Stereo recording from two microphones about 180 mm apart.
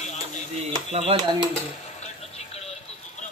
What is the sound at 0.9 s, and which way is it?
Speech, 35° right (ahead or behind).